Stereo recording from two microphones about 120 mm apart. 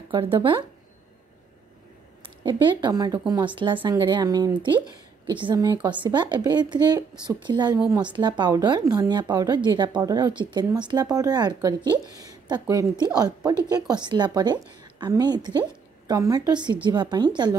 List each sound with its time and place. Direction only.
0.1 s speech: 45° right (ahead or behind)
2.2 s speech: 40° right (ahead or behind)